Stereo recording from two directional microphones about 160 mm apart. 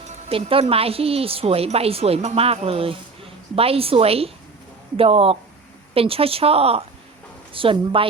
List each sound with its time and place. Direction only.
0.3 s a woman's voice: 35° right (ahead or behind)